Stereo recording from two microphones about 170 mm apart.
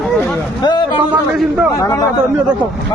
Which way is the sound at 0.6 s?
25° left (ahead or behind).